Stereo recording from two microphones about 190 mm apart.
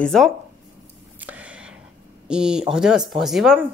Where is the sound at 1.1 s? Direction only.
10° right (ahead or behind).